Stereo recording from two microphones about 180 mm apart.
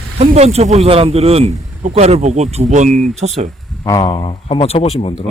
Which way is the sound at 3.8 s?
20° left (ahead or behind).